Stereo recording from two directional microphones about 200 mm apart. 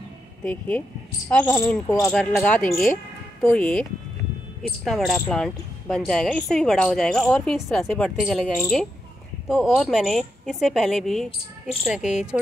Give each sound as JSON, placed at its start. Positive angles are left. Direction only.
{"t": 0.4, "sound": "speech", "side_deg": 5}
{"t": 2.1, "sound": "speech", "side_deg": 5}
{"t": 4.8, "sound": "speech", "side_deg": 0}